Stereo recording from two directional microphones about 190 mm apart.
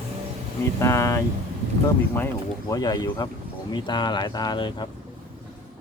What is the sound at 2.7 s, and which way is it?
Speech, 20° left (ahead or behind).